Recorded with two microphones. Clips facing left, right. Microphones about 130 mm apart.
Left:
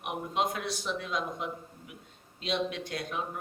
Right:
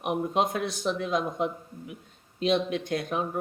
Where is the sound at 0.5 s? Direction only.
50° right (ahead or behind).